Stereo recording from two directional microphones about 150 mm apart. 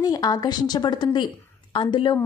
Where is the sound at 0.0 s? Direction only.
25° left (ahead or behind).